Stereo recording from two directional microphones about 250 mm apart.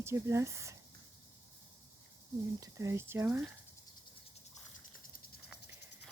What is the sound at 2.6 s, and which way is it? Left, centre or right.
Speech, centre.